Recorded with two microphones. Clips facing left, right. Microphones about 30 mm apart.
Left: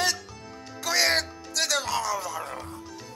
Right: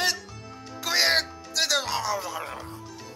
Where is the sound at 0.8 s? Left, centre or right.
Centre.